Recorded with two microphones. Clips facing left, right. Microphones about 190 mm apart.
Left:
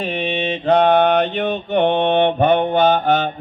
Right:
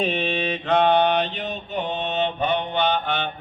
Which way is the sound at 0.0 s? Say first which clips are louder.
Left 2 dB; 10° left (ahead or behind).